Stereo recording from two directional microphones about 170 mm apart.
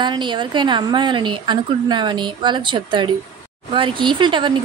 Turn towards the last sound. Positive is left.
turn(degrees=-25)  # may be behind; listen again after turning